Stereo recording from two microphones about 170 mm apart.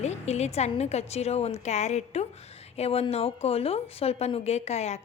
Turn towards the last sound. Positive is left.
turn(degrees=40)  # may be behind; listen again after turning